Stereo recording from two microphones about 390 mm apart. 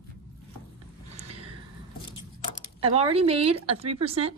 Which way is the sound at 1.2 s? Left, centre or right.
Centre.